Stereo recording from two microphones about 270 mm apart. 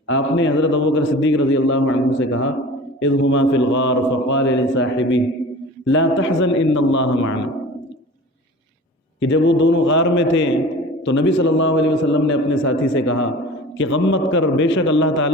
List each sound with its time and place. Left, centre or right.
0.1 s a man's voice: left
9.2 s a man's voice: left